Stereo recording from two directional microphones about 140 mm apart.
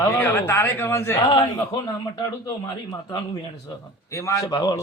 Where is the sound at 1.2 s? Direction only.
35° left (ahead or behind).